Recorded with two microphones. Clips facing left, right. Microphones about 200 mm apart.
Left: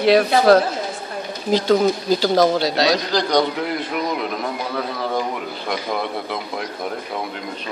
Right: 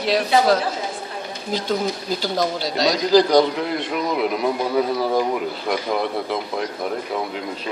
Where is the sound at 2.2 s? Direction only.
80° left.